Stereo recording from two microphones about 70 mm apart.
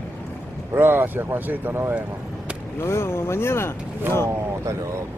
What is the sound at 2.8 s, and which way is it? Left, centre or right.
Speech, left.